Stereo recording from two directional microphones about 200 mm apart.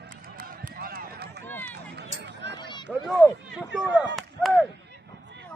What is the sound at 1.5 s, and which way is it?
Run, 10° left (ahead or behind).